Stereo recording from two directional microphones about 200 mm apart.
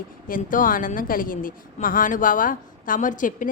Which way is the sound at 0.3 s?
45° left (ahead or behind).